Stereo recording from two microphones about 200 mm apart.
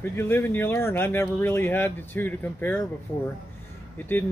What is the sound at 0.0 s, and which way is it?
Speech, 10° left (ahead or behind).